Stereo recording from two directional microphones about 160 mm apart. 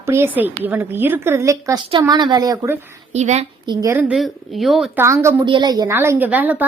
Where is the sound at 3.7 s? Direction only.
20° right (ahead or behind).